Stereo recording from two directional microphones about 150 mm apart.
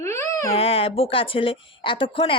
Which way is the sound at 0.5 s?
40° left (ahead or behind).